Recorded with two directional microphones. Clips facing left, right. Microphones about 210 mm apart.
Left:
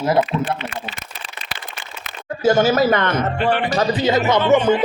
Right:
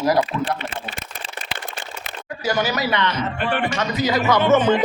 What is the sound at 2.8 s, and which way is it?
Speech, 50° left (ahead or behind).